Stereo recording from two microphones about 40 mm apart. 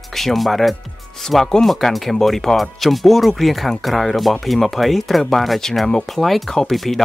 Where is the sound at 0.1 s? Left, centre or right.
Centre.